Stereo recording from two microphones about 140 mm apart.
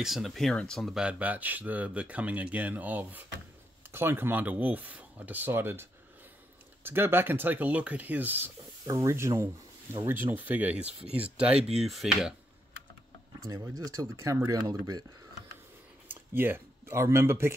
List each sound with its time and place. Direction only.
0.0 s speech: centre (ahead or behind)
13.5 s speech: 25° right (ahead or behind)
16.1 s speech: 15° right (ahead or behind)